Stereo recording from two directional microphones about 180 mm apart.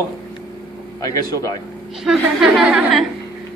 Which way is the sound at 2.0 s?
Centre (ahead or behind).